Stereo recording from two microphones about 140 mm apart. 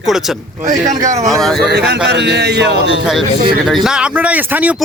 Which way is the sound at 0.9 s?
25° right (ahead or behind).